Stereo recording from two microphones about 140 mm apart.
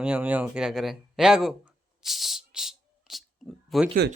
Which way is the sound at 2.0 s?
Centre (ahead or behind).